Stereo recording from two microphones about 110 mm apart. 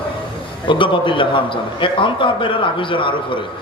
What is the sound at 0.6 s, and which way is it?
A man's voice, 50° left (ahead or behind).